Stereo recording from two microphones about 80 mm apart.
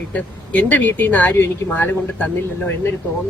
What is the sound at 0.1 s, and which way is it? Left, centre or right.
Speech, centre.